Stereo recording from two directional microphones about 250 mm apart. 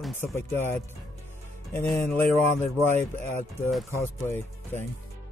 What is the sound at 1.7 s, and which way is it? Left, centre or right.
Speech, centre.